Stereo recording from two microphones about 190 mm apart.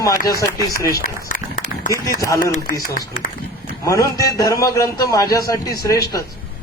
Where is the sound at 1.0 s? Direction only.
45° left (ahead or behind).